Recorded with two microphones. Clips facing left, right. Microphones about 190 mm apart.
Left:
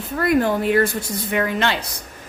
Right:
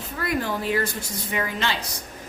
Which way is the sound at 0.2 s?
55° left (ahead or behind).